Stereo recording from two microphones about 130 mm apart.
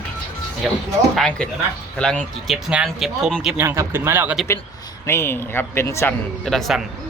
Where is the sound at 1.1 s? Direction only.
5° left (ahead or behind).